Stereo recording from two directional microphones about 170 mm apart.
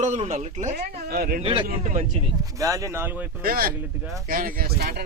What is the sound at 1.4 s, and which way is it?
Speech, 30° right (ahead or behind).